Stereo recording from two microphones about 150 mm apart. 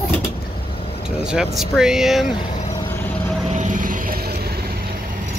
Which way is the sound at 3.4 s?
50° right (ahead or behind).